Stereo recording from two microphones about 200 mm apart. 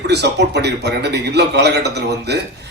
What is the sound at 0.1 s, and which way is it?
Speech, 55° right (ahead or behind).